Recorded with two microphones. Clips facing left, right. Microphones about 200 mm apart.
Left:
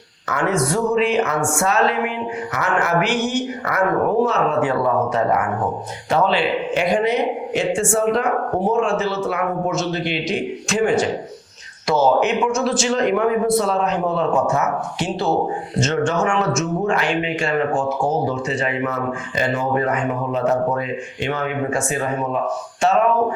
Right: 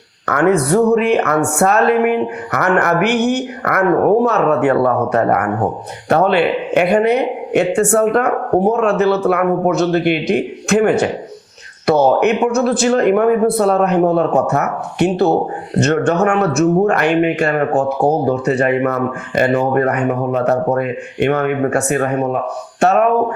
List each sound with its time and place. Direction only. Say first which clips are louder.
0.3 s a man's voice: right 7 dB; 60° right (ahead or behind)